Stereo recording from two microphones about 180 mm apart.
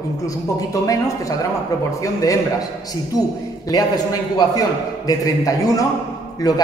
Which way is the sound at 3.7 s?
20° left (ahead or behind).